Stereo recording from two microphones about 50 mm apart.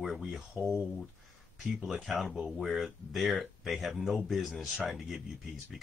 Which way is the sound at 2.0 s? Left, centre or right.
Centre.